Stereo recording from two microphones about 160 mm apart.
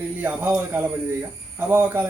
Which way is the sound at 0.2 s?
10° right (ahead or behind).